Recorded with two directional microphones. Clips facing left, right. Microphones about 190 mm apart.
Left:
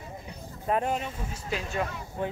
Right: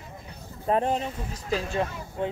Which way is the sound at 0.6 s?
30° right (ahead or behind).